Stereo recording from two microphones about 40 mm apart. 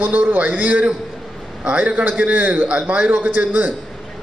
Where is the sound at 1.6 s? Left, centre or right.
Right.